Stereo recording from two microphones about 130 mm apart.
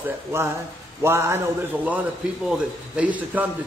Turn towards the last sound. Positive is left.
turn(degrees=-10)  # may be behind; listen again after turning